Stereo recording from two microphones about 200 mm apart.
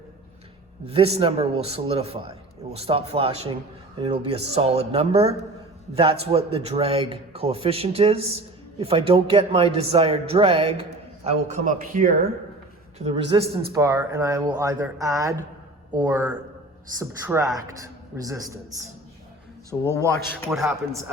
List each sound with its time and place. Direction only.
0.9 s a man's voice: 30° right (ahead or behind)
13.0 s a man's voice: 30° right (ahead or behind)
13.4 s speech: 50° right (ahead or behind)
13.7 s a man's voice: 15° right (ahead or behind)
19.9 s speech: 15° left (ahead or behind)
20.5 s a man's voice: 10° right (ahead or behind)